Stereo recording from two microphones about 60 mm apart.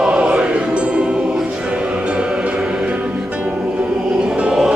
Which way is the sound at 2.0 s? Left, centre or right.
Centre.